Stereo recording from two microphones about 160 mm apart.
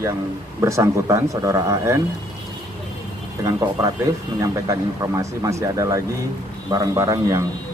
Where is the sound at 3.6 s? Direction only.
20° right (ahead or behind).